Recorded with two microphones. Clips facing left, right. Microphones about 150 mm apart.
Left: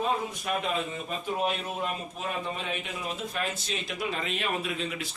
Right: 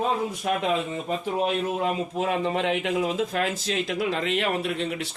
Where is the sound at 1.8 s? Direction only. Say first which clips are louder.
Right 8 dB; 90° right.